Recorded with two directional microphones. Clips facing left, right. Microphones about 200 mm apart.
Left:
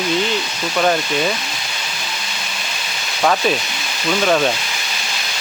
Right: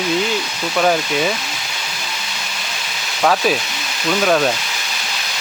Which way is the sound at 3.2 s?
5° right (ahead or behind).